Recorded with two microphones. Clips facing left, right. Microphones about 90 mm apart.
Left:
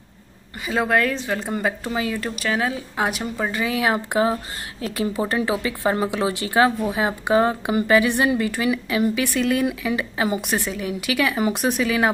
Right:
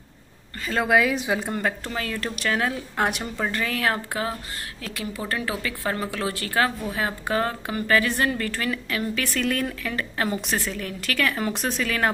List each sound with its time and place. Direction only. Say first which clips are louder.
0.8 s a woman's voice: right 1 dB; 5° right (ahead or behind)
1.1 s a woman's voice: right 1 dB; 15° right (ahead or behind)
1.4 s a woman's voice: left 2 dB; centre (ahead or behind)